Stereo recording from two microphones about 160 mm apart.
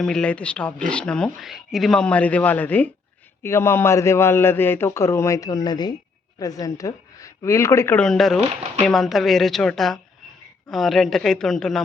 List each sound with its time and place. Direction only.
0.0 s a woman's voice: 5° left (ahead or behind)